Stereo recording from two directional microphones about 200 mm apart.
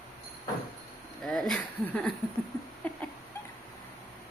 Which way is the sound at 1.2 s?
5° left (ahead or behind).